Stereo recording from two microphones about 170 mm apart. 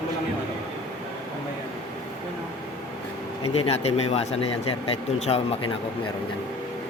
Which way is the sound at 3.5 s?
35° left (ahead or behind).